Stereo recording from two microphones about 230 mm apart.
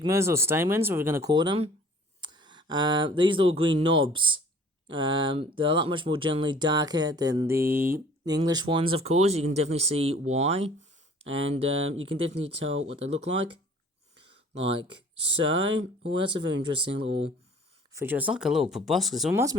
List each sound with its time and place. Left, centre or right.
0.0 s speech: centre
12.6 s speech: right
13.0 s speech: right
15.7 s speech: right
17.9 s speech: centre